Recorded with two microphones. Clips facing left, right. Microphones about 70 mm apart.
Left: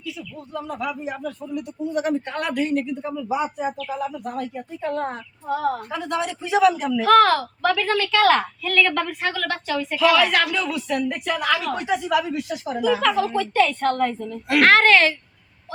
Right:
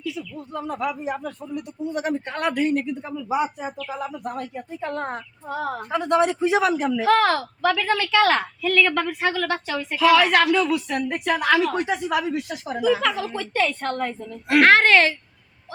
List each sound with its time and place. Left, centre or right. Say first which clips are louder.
0.5 s speech: right 1 dB; right
5.9 s speech: right 6 dB; right
6.9 s a woman's voice: left 3 dB; centre
8.3 s a woman's voice: left 1 dB; centre
10.9 s speech: even; right
12.8 s a woman's voice: left 1 dB; centre
14.4 s speech: even; right